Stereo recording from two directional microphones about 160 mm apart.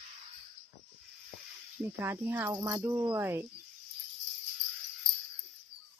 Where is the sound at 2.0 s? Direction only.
15° right (ahead or behind).